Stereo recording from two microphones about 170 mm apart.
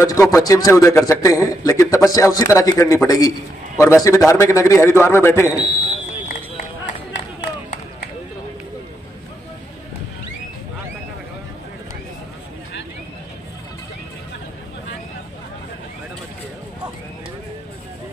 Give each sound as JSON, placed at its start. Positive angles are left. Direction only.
{"t": 0.0, "sound": "a man's voice", "side_deg": 20}